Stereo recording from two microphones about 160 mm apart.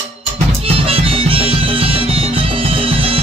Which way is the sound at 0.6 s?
35° right (ahead or behind).